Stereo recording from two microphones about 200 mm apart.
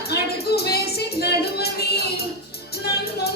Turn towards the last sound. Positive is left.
turn(degrees=55)  # may be behind; listen again after turning